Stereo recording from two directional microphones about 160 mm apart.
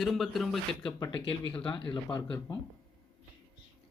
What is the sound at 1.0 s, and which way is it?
Speech, 30° left (ahead or behind).